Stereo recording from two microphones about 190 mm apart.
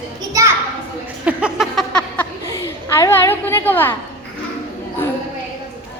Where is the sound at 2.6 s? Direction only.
15° left (ahead or behind).